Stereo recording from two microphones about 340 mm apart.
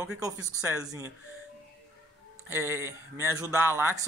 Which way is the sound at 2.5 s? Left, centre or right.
Centre.